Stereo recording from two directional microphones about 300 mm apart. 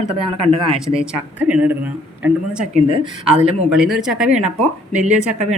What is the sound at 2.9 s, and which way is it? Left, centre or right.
Speech, centre.